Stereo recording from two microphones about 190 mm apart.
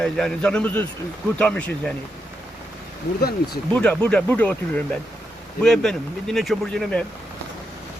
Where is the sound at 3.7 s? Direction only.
5° left (ahead or behind).